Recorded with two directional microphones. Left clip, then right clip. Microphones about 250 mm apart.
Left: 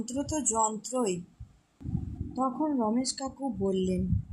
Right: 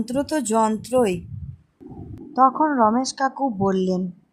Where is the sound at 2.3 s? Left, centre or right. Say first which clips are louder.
Right 13 dB; right.